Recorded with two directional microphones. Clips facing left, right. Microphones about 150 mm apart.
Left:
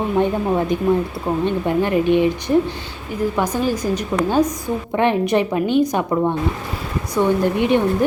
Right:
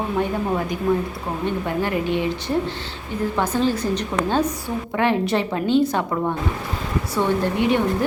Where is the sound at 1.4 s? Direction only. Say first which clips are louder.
Left 3 dB; 20° left (ahead or behind).